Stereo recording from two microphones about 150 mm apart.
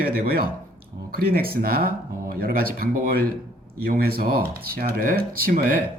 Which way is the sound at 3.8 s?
80° right.